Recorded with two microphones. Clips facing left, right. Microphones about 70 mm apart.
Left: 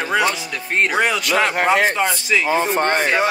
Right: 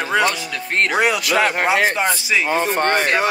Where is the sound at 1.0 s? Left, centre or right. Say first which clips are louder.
Right 2 dB; centre.